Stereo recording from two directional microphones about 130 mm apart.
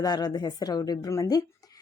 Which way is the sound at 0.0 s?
30° left (ahead or behind).